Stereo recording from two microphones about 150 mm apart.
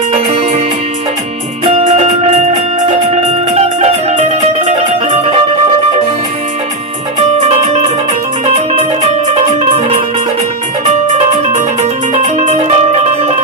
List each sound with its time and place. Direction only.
0.1 s music: 35° right (ahead or behind)
1.6 s music: 45° right (ahead or behind)
8.5 s music: 50° right (ahead or behind)
11.8 s music: 50° right (ahead or behind)